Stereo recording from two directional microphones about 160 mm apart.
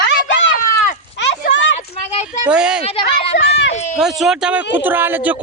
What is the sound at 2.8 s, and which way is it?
Speech, 40° left (ahead or behind).